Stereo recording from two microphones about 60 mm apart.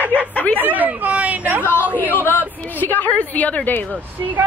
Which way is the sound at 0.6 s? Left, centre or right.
Right.